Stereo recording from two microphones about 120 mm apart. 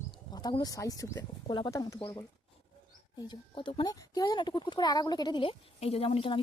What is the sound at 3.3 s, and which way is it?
Speech, 45° left (ahead or behind).